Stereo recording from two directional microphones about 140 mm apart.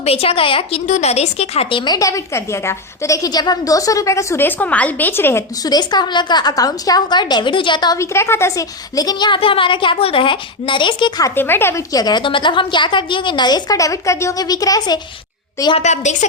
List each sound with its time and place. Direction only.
0.0 s a woman's voice: 45° left (ahead or behind)
0.9 s a woman's voice: 55° left (ahead or behind)
1.8 s a woman's voice: 25° left (ahead or behind)
5.6 s a woman's voice: 30° left (ahead or behind)
7.9 s a woman's voice: 20° left (ahead or behind); by 11.3 s 35° left (ahead or behind)
11.3 s a woman's voice: 15° left (ahead or behind)
15.8 s a woman's voice: 55° left (ahead or behind)